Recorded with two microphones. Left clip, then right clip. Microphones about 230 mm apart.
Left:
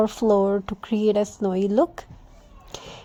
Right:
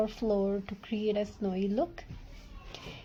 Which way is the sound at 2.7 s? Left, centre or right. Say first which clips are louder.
Left 8 dB; left.